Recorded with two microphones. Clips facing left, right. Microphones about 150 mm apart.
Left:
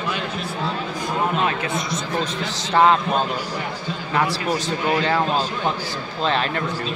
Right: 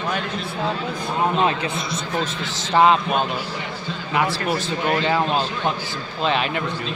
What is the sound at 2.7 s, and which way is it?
Speech, 15° right (ahead or behind).